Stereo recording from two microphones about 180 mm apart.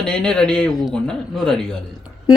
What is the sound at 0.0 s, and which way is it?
Speech, 5° left (ahead or behind).